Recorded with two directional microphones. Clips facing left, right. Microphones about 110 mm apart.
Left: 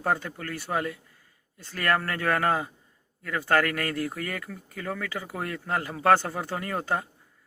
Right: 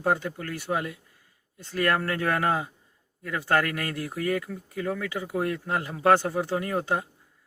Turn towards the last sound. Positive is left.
turn(degrees=-15)  # may be behind; listen again after turning